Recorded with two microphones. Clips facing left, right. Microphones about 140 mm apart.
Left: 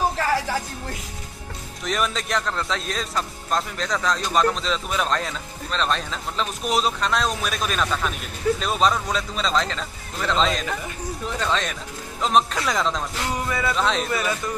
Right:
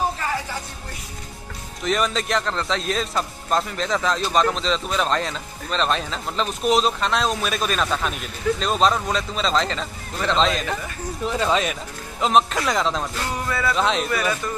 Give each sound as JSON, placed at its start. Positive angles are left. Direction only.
{"t": 1.9, "sound": "a man's voice", "side_deg": 0}
{"t": 13.5, "sound": "speech", "side_deg": 20}
{"t": 13.7, "sound": "a man's voice", "side_deg": 0}